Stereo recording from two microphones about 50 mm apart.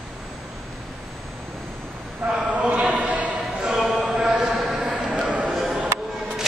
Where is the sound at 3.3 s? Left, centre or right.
Centre.